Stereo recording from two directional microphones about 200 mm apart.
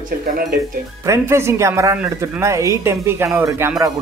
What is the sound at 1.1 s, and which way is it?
Speech, 15° right (ahead or behind).